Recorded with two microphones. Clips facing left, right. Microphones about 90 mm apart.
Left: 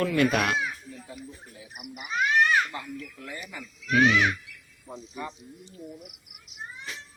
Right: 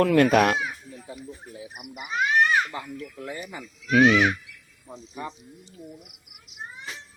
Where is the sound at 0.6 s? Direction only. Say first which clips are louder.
Right 1 dB; 15° right (ahead or behind).